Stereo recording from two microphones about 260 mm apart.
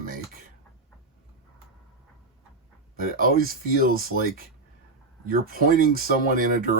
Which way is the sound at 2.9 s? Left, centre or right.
Right.